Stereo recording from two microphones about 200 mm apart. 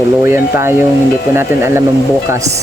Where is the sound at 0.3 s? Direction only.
10° right (ahead or behind).